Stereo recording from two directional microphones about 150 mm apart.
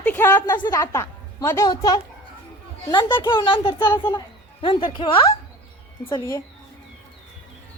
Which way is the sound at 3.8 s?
15° left (ahead or behind).